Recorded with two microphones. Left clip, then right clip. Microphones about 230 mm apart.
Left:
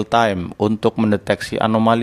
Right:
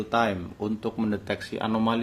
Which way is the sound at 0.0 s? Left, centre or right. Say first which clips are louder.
Left 9 dB; left.